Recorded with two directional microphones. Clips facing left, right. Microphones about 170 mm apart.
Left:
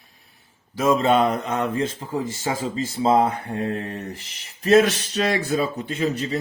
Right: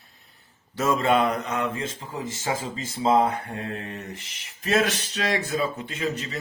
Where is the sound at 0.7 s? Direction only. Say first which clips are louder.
Left 3 dB; 15° left (ahead or behind).